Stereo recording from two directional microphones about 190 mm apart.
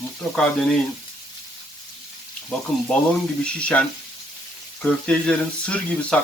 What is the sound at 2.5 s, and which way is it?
Speech, 5° left (ahead or behind).